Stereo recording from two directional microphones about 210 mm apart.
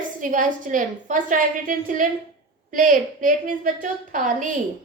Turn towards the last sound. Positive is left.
turn(degrees=-35)  # may be behind; listen again after turning